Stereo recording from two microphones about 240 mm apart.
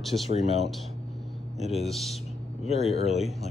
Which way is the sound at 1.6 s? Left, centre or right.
Centre.